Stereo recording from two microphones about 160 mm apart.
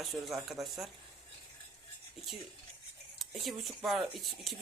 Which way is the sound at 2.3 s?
Centre (ahead or behind).